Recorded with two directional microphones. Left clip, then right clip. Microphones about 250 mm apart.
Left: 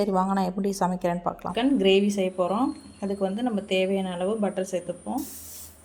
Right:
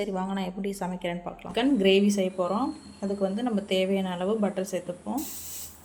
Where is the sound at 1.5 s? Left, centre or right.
Centre.